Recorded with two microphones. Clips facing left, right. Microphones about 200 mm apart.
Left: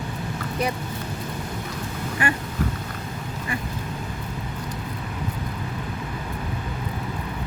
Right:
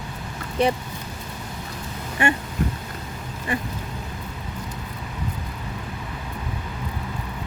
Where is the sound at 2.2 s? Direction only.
25° right (ahead or behind).